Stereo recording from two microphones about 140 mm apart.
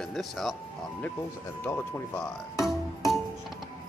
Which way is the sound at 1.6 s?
15° left (ahead or behind).